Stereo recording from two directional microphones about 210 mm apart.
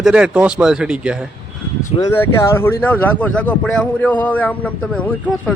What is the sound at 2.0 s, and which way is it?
Speech, 10° left (ahead or behind).